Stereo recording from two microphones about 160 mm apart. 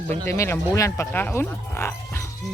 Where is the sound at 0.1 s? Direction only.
15° left (ahead or behind).